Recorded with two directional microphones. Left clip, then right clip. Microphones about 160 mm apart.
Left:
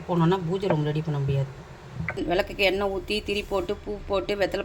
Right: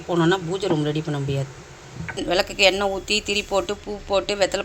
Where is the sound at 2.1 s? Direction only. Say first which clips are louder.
Right 4 dB; 5° left (ahead or behind).